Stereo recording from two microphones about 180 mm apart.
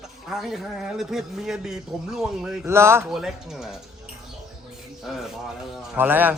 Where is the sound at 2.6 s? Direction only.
15° right (ahead or behind).